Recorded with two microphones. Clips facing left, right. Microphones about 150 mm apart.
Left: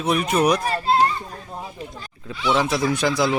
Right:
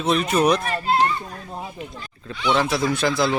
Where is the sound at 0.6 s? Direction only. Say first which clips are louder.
Left 1 dB; 35° left (ahead or behind).